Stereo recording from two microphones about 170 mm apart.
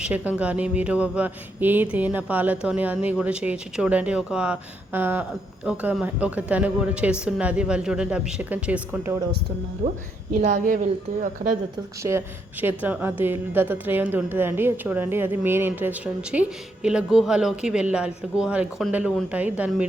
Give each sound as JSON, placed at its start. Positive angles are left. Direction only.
{"t": 0.0, "sound": "a woman's voice", "side_deg": -10}
{"t": 9.8, "sound": "speech", "side_deg": -45}
{"t": 12.6, "sound": "a woman's voice", "side_deg": -10}